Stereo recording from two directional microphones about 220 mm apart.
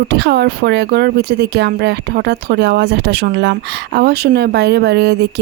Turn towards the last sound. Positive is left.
turn(degrees=-50)  # may be behind; listen again after turning